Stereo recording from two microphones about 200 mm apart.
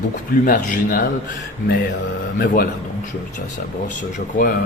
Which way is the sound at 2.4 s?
50° left (ahead or behind).